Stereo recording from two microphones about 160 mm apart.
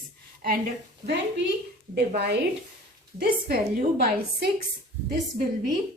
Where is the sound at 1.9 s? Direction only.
90° right.